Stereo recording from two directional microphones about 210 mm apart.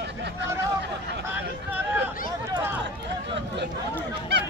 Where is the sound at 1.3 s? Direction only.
10° right (ahead or behind).